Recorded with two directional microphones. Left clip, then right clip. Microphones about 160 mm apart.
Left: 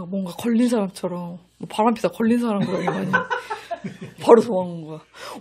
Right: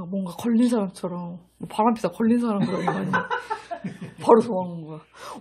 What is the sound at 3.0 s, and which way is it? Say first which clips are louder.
Chuckle: left 3 dB; 50° left (ahead or behind).